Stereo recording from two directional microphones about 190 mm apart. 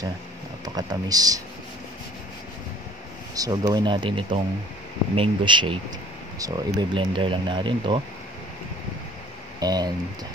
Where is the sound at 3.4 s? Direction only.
20° right (ahead or behind).